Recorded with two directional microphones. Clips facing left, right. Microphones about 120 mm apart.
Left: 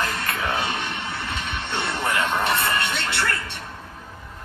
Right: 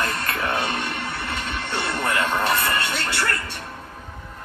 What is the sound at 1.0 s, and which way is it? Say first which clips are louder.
Music: right 1 dB; 25° left (ahead or behind).